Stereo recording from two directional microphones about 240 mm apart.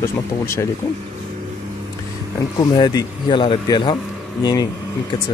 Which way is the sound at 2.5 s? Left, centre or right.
Centre.